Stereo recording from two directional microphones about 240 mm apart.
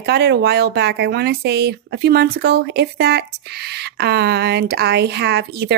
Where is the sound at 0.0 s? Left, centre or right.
Right.